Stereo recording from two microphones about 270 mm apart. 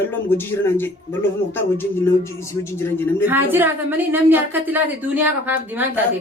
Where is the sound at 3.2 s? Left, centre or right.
Centre.